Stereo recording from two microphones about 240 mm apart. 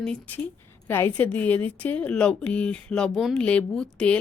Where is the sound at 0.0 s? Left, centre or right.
Centre.